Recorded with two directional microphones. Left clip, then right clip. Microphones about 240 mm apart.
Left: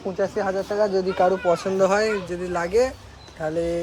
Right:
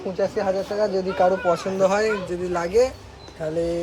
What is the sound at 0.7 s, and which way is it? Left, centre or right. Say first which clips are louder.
Speech: left 1 dB; left.